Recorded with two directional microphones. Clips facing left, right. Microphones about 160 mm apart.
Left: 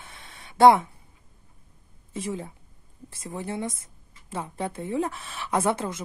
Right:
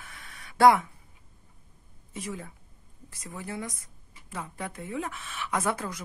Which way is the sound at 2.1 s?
30° left (ahead or behind).